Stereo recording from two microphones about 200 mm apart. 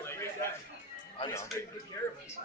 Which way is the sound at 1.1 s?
20° left (ahead or behind).